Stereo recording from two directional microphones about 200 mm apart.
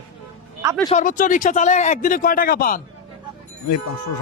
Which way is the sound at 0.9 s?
40° left (ahead or behind).